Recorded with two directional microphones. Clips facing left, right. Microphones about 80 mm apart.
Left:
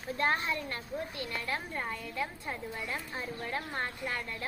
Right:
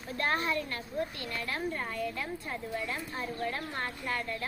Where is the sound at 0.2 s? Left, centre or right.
Centre.